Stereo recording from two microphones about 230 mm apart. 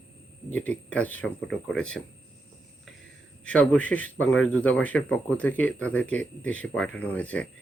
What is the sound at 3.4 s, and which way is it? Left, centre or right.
A man's voice, centre.